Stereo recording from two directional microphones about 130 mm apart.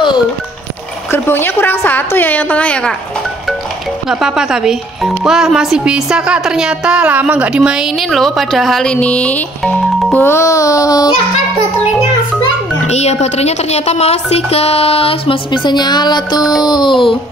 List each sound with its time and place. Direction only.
1.1 s a woman's voice: 15° left (ahead or behind)
4.1 s a child's voice: 5° right (ahead or behind); by 11.1 s 30° left (ahead or behind)
12.8 s a woman's voice: 55° left (ahead or behind); by 16.5 s 30° left (ahead or behind)
16.6 s a sound: 35° left (ahead or behind)